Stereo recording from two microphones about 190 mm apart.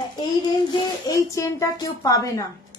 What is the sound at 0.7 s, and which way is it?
A woman's voice, 20° left (ahead or behind).